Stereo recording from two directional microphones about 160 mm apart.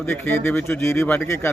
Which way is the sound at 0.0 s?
10° left (ahead or behind).